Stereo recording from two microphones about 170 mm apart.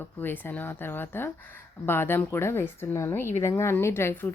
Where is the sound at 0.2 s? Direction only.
10° left (ahead or behind).